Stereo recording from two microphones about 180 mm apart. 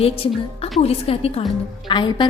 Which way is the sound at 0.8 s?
35° left (ahead or behind).